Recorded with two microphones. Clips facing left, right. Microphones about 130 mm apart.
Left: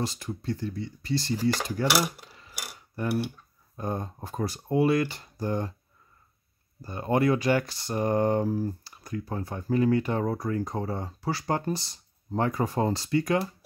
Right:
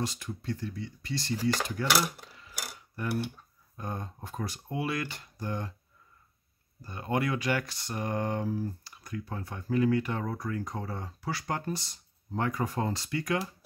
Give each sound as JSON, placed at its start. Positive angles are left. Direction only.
{"t": 0.0, "sound": "speech", "side_deg": 30}
{"t": 1.9, "sound": "speech", "side_deg": 10}
{"t": 3.7, "sound": "speech", "side_deg": 35}
{"t": 6.8, "sound": "speech", "side_deg": 35}